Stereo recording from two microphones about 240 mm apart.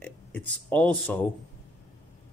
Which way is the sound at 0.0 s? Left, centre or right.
Centre.